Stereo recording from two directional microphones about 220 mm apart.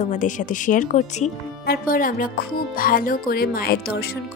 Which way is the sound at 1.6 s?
45° left (ahead or behind).